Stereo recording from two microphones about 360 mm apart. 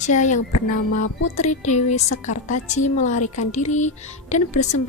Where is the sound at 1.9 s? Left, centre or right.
Left.